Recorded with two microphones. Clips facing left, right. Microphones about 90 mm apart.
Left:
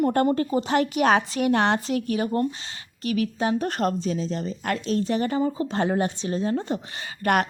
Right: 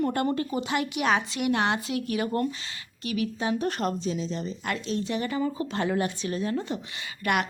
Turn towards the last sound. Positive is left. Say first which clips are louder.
# left 4 dB
turn(degrees=40)  # may be behind; listen again after turning